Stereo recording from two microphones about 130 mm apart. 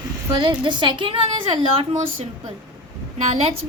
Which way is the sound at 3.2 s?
50° right (ahead or behind).